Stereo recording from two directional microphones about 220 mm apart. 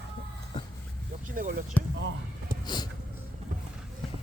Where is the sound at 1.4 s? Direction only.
40° right (ahead or behind).